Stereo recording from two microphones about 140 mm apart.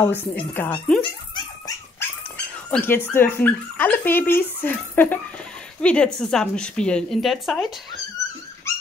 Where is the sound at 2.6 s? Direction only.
15° left (ahead or behind); by 7.7 s centre (ahead or behind).